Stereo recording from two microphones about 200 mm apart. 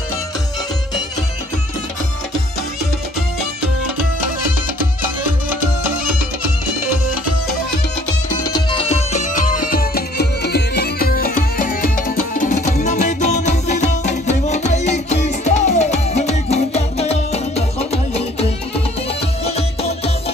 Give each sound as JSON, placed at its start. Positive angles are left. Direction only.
{"t": 4.7, "sound": "music", "side_deg": -10}
{"t": 8.5, "sound": "music", "side_deg": 20}